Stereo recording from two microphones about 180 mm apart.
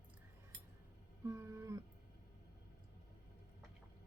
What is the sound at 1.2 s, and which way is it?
Cat, 15° right (ahead or behind).